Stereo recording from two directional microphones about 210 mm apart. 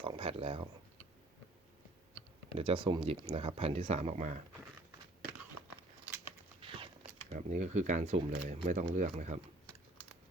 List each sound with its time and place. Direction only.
0.0 s speech: 25° right (ahead or behind)
2.6 s speech: 25° right (ahead or behind)
6.6 s a sound: 25° right (ahead or behind)
7.3 s speech: 35° right (ahead or behind)